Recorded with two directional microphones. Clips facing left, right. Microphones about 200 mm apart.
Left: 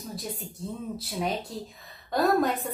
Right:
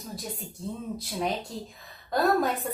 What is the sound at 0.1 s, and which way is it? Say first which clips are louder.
Speech: even; centre (ahead or behind).